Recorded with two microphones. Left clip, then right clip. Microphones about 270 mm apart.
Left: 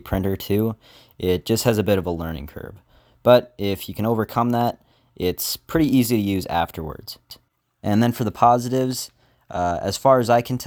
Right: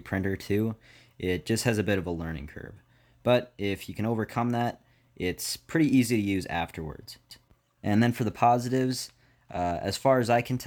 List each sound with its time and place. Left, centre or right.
0.0 s speech: left